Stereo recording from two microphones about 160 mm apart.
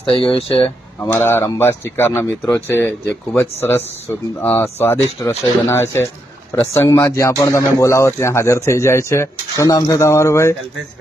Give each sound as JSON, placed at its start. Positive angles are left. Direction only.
{"t": 0.1, "sound": "speech", "side_deg": 35}
{"t": 0.9, "sound": "speech", "side_deg": 15}